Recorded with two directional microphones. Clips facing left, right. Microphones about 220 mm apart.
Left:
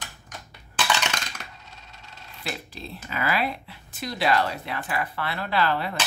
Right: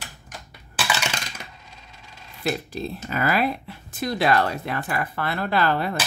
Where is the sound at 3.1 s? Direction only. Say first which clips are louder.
Right 4 dB; 45° right (ahead or behind).